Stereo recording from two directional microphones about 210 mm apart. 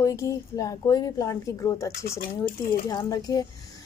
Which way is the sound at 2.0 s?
45° left (ahead or behind).